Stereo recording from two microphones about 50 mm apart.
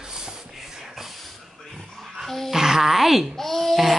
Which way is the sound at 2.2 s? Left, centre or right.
Centre.